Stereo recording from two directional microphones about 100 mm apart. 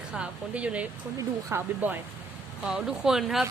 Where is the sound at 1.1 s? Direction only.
25° right (ahead or behind).